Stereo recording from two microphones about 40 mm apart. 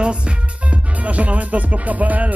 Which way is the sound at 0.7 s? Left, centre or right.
Right.